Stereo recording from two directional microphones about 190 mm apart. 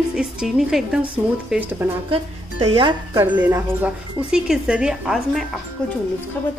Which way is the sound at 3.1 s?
10° right (ahead or behind).